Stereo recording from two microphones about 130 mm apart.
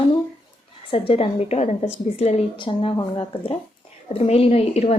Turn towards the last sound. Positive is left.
turn(degrees=55)  # may be behind; listen again after turning